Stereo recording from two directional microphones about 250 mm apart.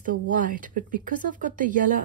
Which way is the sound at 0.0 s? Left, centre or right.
Right.